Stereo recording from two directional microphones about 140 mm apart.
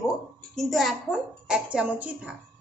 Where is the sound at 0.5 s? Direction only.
Centre (ahead or behind).